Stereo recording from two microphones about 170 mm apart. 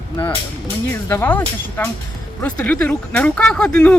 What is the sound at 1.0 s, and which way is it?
Speech, 15° left (ahead or behind).